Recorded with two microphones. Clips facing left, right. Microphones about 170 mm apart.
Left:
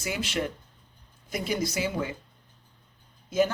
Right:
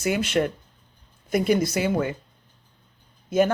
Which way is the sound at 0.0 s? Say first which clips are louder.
Right 7 dB; 55° right (ahead or behind).